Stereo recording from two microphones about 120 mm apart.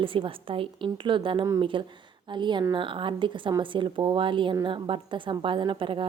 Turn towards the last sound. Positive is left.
turn(degrees=-45)  # may be behind; listen again after turning